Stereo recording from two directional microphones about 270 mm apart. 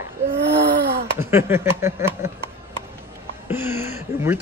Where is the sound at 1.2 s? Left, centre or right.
Centre.